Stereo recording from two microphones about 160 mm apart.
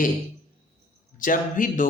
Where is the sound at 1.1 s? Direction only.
55° left (ahead or behind).